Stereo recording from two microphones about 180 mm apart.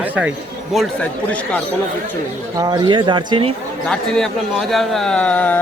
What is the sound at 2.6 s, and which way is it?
Speech, 25° right (ahead or behind).